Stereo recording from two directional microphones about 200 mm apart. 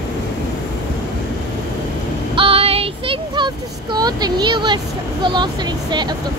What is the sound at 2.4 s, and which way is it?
Child singing, 30° right (ahead or behind).